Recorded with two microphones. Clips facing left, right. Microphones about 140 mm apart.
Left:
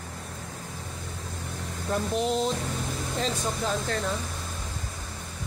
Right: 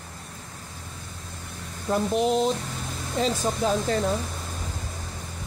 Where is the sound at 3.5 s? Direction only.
20° right (ahead or behind).